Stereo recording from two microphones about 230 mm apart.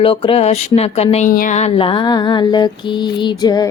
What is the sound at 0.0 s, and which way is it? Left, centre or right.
A woman's voice, left.